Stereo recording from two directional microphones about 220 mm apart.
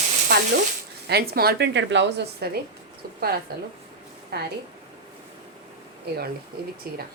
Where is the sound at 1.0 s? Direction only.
45° right (ahead or behind).